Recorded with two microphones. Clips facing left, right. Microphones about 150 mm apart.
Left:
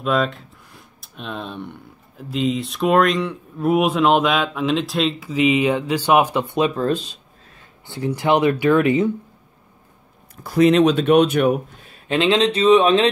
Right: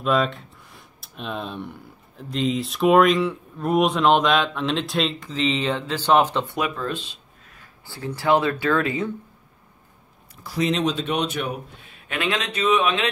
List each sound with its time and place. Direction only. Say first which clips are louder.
0.0 s speech: left 1 dB; centre (ahead or behind); by 6.7 s 20° left (ahead or behind)
6.7 s speech: left 8 dB; 40° left (ahead or behind)
7.5 s speech: left 8 dB; 20° left (ahead or behind)
10.4 s speech: left 9 dB; 55° left (ahead or behind)
11.8 s a sound: left 10 dB; 40° left (ahead or behind)
12.2 s speech: left 8 dB; 25° left (ahead or behind)